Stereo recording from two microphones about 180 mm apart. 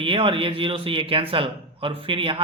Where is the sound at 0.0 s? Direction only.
30° right (ahead or behind).